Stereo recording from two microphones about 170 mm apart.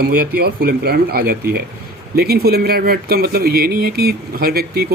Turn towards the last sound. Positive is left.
turn(degrees=-65)  # may be behind; listen again after turning